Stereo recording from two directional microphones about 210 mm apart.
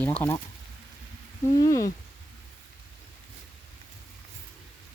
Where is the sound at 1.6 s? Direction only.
15° left (ahead or behind).